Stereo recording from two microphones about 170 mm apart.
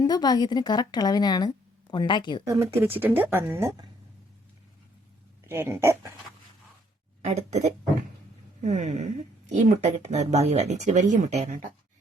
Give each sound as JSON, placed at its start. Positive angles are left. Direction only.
{"t": 0.0, "sound": "speech", "side_deg": 25}
{"t": 2.4, "sound": "speech", "side_deg": -20}
{"t": 5.5, "sound": "speech", "side_deg": -15}
{"t": 7.2, "sound": "speech", "side_deg": -40}